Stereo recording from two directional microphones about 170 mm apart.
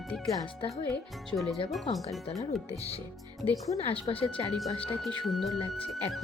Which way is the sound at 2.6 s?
35° left (ahead or behind).